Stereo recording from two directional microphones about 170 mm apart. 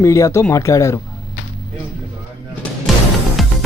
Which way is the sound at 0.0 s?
20° left (ahead or behind).